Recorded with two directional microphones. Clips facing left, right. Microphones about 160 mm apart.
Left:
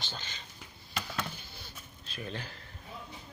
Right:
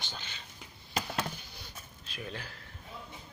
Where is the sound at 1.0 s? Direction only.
40° right (ahead or behind).